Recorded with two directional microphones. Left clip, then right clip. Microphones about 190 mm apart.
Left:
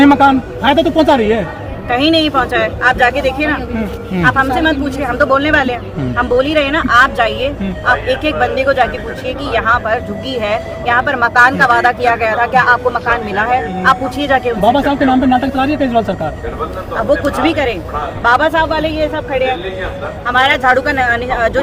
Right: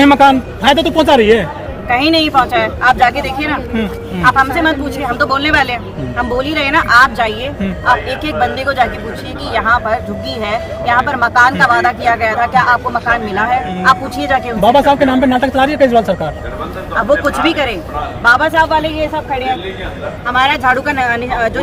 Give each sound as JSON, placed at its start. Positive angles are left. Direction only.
{"t": 0.0, "sound": "speech", "side_deg": -35}
{"t": 2.0, "sound": "speech", "side_deg": 15}
{"t": 4.2, "sound": "speech", "side_deg": 15}
{"t": 14.6, "sound": "speech", "side_deg": -30}
{"t": 17.1, "sound": "speech", "side_deg": 15}
{"t": 20.2, "sound": "speech", "side_deg": 15}